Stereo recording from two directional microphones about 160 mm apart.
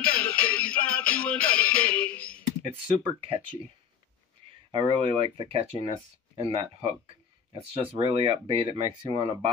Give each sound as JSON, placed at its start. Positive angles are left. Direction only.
{"t": 0.0, "sound": "music", "side_deg": 5}
{"t": 3.0, "sound": "speech", "side_deg": -35}
{"t": 4.6, "sound": "speech", "side_deg": -30}